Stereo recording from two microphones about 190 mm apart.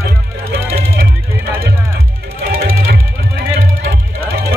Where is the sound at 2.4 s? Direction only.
55° right (ahead or behind).